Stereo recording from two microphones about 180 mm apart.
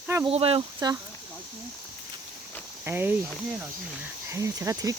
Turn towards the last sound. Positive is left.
turn(degrees=-20)  # may be behind; listen again after turning